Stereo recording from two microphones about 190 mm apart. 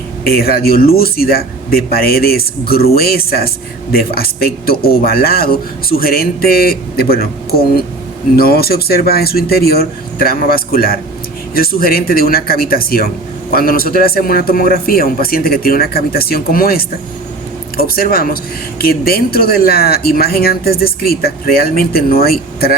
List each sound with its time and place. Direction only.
0.3 s speech: 55° left (ahead or behind)